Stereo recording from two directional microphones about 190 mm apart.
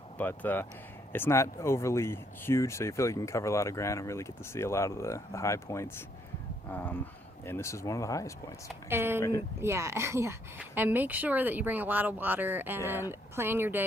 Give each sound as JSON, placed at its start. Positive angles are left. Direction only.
{"t": 0.2, "sound": "speech", "side_deg": 10}
{"t": 8.9, "sound": "a woman's voice", "side_deg": -10}